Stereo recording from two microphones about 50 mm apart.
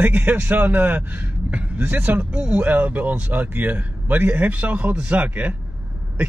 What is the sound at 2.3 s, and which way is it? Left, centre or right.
Speech, centre.